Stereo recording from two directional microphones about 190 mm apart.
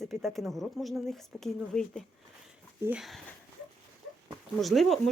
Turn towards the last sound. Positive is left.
turn(degrees=0)  # may be behind; listen again after turning